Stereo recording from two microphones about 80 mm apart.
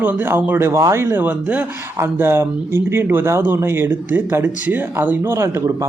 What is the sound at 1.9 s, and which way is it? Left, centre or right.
A man's voice, right.